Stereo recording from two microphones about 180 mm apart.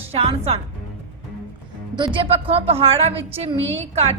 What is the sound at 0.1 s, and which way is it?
Speech, 35° right (ahead or behind).